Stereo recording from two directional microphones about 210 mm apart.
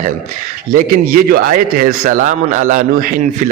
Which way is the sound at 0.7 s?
45° right (ahead or behind).